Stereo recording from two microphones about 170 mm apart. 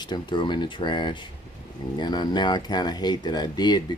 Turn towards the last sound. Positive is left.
turn(degrees=25)  # may be behind; listen again after turning